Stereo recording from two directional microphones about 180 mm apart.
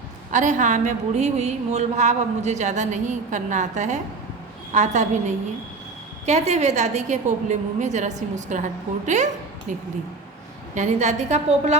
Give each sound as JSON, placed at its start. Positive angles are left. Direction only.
{"t": 0.3, "sound": "a woman's voice", "side_deg": -45}